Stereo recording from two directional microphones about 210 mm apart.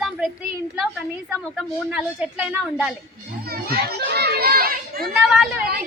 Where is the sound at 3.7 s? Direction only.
50° right (ahead or behind).